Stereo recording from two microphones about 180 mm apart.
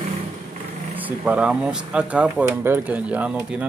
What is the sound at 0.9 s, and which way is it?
Speech, 10° right (ahead or behind).